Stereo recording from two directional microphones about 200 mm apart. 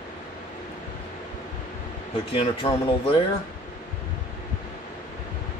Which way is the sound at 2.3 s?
25° left (ahead or behind).